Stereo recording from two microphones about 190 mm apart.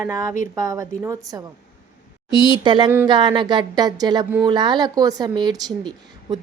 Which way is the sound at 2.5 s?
25° right (ahead or behind).